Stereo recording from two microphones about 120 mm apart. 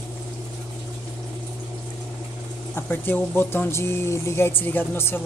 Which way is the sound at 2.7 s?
15° left (ahead or behind).